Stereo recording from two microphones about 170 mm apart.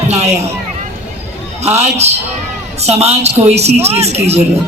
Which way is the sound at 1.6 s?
40° right (ahead or behind).